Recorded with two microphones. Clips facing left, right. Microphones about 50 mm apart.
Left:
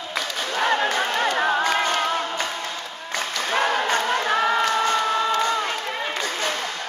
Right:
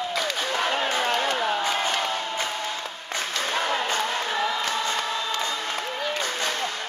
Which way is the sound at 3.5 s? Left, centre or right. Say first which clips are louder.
Left 5 dB; left.